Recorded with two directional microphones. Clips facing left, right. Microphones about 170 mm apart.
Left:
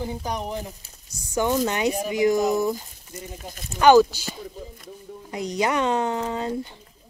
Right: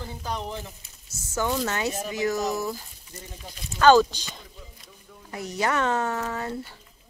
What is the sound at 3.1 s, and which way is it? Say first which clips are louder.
Speech: left 6 dB; 45° left (ahead or behind).